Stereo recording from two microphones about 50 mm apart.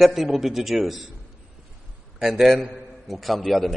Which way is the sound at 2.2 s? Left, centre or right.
Centre.